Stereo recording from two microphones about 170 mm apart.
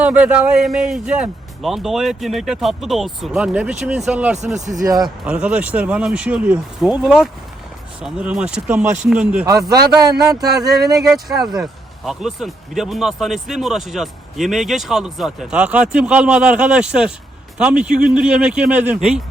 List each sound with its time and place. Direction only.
0.0 s speech: 10° right (ahead or behind)
4.8 s a man's voice: 20° right (ahead or behind)
5.0 s speech: 5° right (ahead or behind)
9.5 s a man's voice: 20° right (ahead or behind)
11.1 s speech: centre (ahead or behind)